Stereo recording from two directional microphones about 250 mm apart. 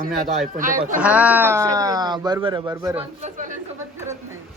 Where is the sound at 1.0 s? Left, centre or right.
Centre.